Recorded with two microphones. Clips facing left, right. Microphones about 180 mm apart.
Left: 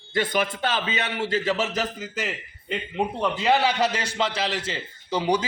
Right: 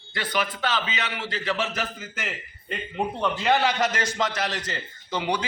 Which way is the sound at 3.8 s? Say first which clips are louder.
Left 1 dB; 30° left (ahead or behind).